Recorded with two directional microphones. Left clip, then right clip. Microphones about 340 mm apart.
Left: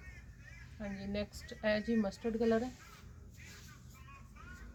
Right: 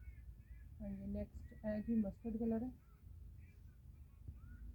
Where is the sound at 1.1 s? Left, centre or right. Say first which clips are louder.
Left 9 dB; centre.